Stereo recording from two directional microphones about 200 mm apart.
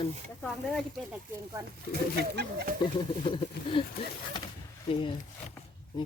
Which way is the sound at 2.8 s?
25° left (ahead or behind).